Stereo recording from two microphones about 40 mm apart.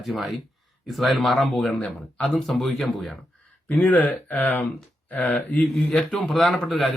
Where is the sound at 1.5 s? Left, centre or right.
Left.